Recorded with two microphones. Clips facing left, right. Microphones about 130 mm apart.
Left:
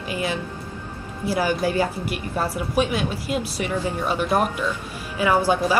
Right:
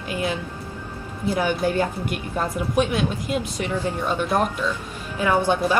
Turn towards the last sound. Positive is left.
turn(degrees=10)  # may be behind; listen again after turning